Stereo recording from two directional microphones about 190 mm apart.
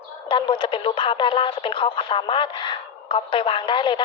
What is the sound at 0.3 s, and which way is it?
Speech, 25° left (ahead or behind).